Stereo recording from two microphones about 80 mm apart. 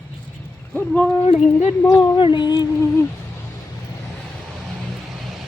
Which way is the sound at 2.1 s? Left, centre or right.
Left.